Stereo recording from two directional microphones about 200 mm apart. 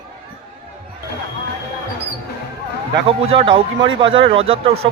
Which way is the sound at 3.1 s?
25° right (ahead or behind).